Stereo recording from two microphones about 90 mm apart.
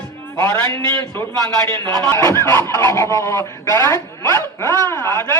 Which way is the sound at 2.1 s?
30° left (ahead or behind).